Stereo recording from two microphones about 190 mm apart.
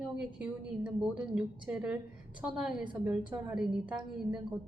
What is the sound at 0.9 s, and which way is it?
Speech, 5° right (ahead or behind).